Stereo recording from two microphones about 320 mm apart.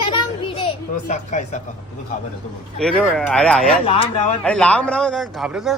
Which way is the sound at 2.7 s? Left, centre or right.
Centre.